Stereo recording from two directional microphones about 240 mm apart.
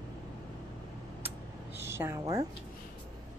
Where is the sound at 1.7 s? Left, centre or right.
Centre.